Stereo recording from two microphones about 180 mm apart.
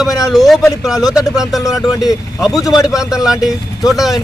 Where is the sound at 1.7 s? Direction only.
20° left (ahead or behind).